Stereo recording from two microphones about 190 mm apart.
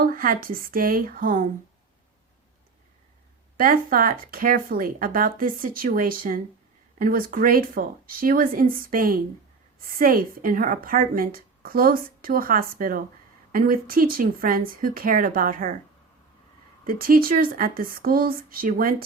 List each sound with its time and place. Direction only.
0.0 s a woman's voice: 50° right (ahead or behind)
3.6 s a woman's voice: 50° right (ahead or behind)
16.8 s a woman's voice: 50° right (ahead or behind)